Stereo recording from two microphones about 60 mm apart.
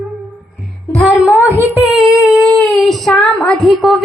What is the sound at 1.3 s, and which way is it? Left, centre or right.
Music, right.